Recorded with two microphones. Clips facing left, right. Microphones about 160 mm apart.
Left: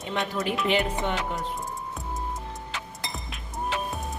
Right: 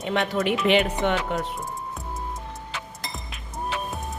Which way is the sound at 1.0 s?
85° right.